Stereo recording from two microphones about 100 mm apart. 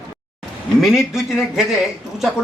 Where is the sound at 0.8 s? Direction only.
5° right (ahead or behind).